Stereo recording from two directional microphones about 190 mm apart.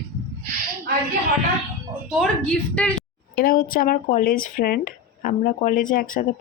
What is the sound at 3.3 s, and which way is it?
Speech, 50° left (ahead or behind).